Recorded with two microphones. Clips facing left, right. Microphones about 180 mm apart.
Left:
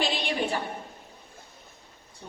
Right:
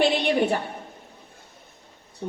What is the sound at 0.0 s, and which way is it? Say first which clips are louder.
Speech: right 8 dB; 60° right (ahead or behind).